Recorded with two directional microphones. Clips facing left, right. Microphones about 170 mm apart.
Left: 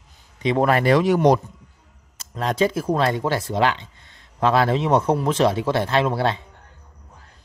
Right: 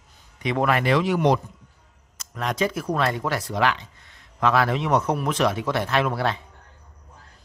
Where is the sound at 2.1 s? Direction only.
30° left (ahead or behind).